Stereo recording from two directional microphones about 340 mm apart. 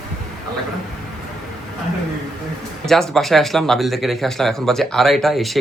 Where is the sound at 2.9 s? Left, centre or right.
Centre.